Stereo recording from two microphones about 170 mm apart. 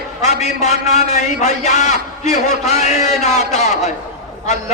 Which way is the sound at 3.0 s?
40° left (ahead or behind).